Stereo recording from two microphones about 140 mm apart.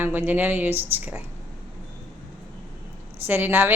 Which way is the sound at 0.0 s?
15° right (ahead or behind).